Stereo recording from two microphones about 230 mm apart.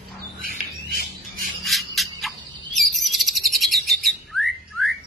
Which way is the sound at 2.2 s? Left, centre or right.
Centre.